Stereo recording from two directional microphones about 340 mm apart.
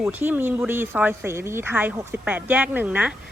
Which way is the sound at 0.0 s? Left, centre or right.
Centre.